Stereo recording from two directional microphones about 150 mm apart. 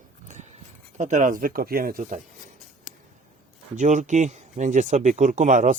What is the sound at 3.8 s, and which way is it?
Speech, 55° right (ahead or behind).